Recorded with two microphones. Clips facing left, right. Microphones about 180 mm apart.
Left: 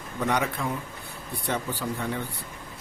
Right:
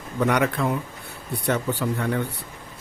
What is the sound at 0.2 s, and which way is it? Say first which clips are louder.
Speech: right 5 dB; 65° right (ahead or behind).